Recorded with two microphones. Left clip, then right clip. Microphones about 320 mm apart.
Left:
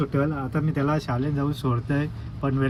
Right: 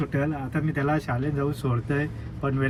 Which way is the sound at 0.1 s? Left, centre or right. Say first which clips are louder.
Left 2 dB; centre.